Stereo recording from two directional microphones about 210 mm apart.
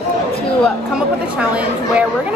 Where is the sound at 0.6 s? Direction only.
5° right (ahead or behind).